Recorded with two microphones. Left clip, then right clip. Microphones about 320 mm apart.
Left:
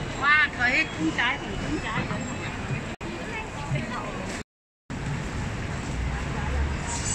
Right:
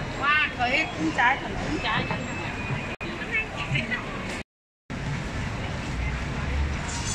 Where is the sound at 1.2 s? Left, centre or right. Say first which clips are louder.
Right 4 dB; centre.